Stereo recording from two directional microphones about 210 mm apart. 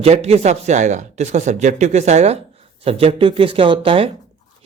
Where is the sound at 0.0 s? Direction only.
30° right (ahead or behind).